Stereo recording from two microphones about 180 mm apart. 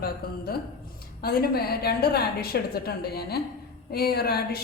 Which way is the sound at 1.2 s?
60° left (ahead or behind).